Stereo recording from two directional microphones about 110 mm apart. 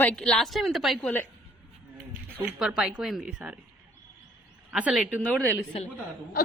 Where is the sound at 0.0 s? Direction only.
10° left (ahead or behind).